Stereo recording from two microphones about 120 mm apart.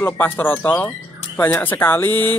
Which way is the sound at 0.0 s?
15° left (ahead or behind).